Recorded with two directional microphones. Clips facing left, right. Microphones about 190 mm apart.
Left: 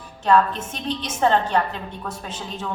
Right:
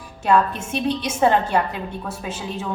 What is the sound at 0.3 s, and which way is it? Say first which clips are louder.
A woman's voice: even; 10° right (ahead or behind).